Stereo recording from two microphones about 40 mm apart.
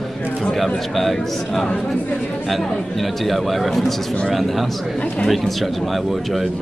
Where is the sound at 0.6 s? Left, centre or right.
Centre.